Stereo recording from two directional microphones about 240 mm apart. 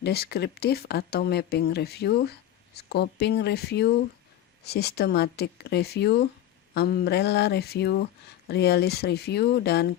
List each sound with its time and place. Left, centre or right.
0.0 s speech: left